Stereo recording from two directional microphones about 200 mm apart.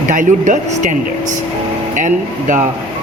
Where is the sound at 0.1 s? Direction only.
40° right (ahead or behind).